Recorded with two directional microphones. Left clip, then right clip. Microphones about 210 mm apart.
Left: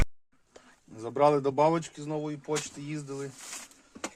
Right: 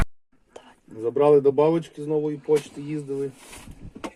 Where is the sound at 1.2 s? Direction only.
40° left (ahead or behind).